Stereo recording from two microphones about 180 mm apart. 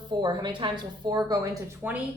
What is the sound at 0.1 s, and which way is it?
A woman's voice, 25° right (ahead or behind).